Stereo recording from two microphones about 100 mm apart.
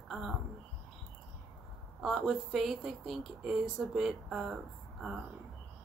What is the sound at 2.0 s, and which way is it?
Speech, centre (ahead or behind).